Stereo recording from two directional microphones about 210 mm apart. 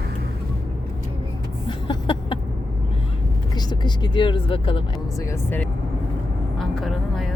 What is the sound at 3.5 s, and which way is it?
Speech, 20° left (ahead or behind).